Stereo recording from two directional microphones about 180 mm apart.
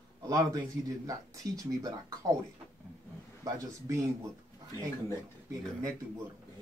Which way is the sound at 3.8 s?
15° right (ahead or behind).